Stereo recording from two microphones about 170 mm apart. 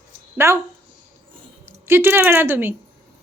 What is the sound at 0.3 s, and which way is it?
Speech, 15° right (ahead or behind).